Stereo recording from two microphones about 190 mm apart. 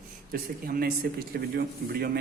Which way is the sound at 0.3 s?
50° right (ahead or behind).